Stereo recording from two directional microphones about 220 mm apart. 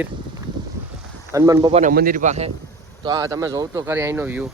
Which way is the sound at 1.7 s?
40° right (ahead or behind).